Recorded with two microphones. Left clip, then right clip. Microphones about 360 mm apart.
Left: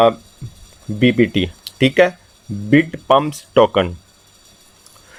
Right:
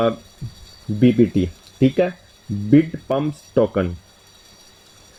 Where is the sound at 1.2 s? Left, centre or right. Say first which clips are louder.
Left 2 dB; left.